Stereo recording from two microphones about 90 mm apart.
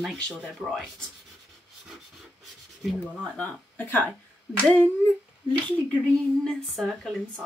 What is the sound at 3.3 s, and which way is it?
Speech, 20° left (ahead or behind).